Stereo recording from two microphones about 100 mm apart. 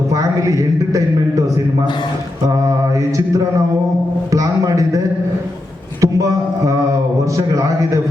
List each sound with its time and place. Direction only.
0.1 s music: 35° right (ahead or behind)
4.3 s a man's voice: 35° right (ahead or behind)
6.0 s a sound: 35° right (ahead or behind)
7.3 s a man's voice: 35° right (ahead or behind)